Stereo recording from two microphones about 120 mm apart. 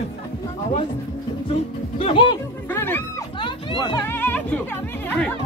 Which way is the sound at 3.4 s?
40° left (ahead or behind).